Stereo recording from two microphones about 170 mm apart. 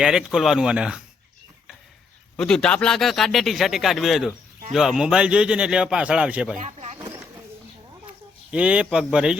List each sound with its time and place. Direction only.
0.0 s a man's voice: 5° right (ahead or behind)
2.3 s a man's voice: 5° left (ahead or behind)
6.6 s a sound: 40° right (ahead or behind)
8.4 s a man's voice: 5° right (ahead or behind)